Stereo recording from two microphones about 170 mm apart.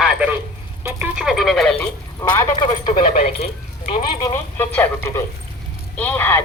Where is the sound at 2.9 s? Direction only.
30° left (ahead or behind).